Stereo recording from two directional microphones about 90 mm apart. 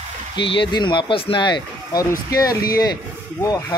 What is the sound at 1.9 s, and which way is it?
Speech, 40° left (ahead or behind).